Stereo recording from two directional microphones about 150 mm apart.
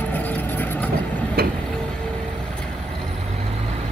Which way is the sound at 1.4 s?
90° right.